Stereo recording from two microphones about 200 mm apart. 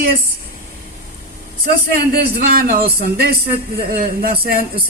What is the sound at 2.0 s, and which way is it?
A man's voice, 50° right (ahead or behind).